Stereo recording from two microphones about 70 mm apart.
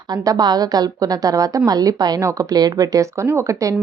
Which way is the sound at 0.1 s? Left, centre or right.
Right.